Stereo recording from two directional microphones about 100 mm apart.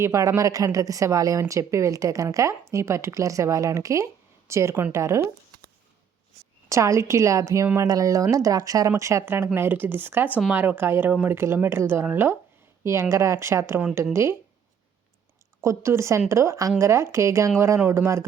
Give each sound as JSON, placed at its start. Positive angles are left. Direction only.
{"t": 0.0, "sound": "a woman's voice", "side_deg": -30}
{"t": 6.7, "sound": "a woman's voice", "side_deg": -30}
{"t": 15.6, "sound": "speech", "side_deg": -30}